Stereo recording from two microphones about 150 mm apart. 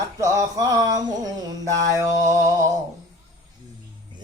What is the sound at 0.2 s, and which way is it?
Mantra, 20° right (ahead or behind).